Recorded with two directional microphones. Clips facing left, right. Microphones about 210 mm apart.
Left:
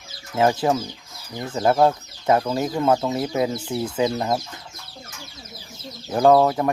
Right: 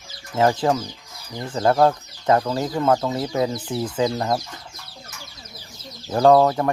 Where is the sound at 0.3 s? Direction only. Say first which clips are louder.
Even; 10° left (ahead or behind).